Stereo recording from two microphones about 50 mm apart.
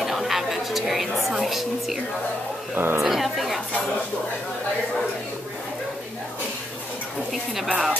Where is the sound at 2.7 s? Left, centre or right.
Right.